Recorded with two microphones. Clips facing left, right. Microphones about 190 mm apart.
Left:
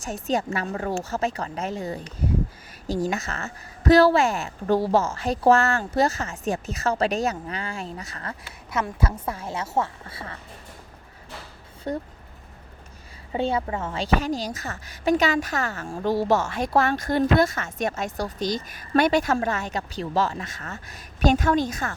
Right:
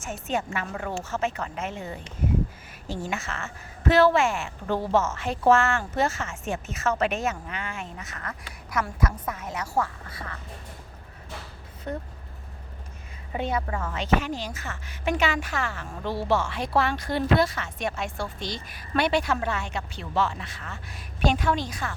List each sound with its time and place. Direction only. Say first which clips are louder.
0.0 s a woman's voice: left 4 dB; 35° left (ahead or behind)
11.9 s a woman's voice: left 4 dB; 35° left (ahead or behind)
13.3 s a woman's voice: left 3 dB; 30° left (ahead or behind); by 21.9 s 45° left (ahead or behind)